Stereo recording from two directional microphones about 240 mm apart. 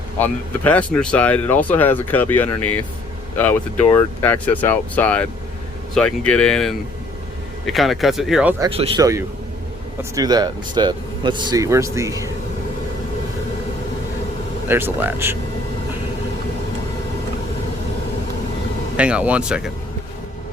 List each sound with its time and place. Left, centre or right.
0.2 s speech: centre
8.7 s speech: centre
14.7 s speech: centre
18.9 s speech: centre